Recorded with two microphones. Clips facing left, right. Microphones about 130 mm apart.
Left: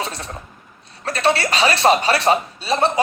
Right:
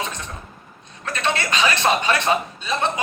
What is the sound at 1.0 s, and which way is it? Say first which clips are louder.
Speech: left 5 dB; 35° left (ahead or behind).